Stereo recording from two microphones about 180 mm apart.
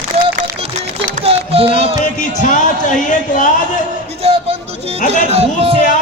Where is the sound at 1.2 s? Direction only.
30° right (ahead or behind).